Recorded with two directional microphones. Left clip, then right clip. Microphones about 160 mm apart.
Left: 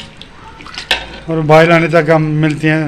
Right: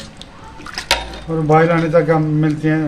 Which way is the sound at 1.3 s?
40° left (ahead or behind).